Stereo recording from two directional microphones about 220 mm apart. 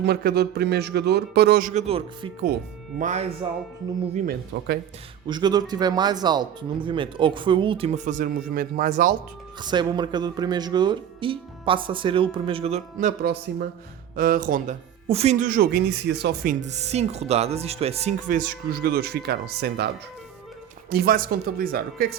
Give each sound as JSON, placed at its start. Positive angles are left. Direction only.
{"t": 0.0, "sound": "a man's voice", "side_deg": -45}
{"t": 5.3, "sound": "speech", "side_deg": -20}
{"t": 9.6, "sound": "speech", "side_deg": -20}
{"t": 15.0, "sound": "speech", "side_deg": -30}
{"t": 20.9, "sound": "speech", "side_deg": -45}